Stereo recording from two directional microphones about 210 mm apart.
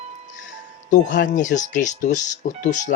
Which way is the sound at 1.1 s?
40° left (ahead or behind).